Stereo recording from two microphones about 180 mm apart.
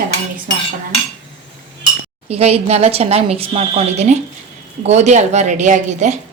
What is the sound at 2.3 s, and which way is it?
A woman's voice, 35° right (ahead or behind).